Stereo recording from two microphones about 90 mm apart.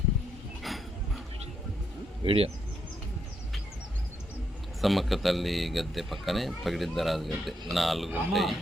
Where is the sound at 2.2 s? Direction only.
90° right.